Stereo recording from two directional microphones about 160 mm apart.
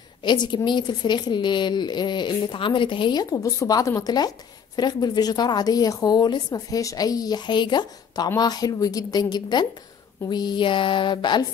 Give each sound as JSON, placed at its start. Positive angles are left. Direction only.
{"t": 0.2, "sound": "a woman's voice", "side_deg": 30}